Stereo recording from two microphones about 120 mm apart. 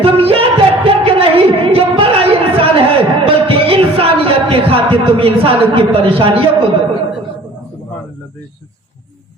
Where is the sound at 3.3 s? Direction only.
50° right (ahead or behind).